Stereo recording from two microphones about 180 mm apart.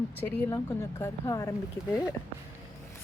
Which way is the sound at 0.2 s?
15° left (ahead or behind).